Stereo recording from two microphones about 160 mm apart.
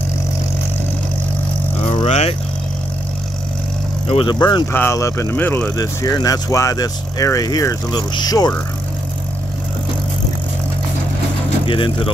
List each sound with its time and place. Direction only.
1.9 s speech: 40° left (ahead or behind)
4.1 s speech: 30° left (ahead or behind)
4.7 s speech: 15° left (ahead or behind)
11.6 s speech: 35° left (ahead or behind)